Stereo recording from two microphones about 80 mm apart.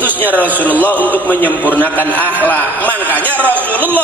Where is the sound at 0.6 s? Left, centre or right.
Left.